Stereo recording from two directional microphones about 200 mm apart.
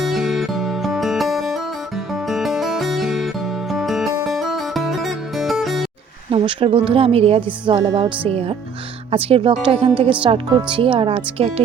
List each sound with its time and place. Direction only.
0.0 s music: centre (ahead or behind)
6.3 s a woman's voice: 25° right (ahead or behind)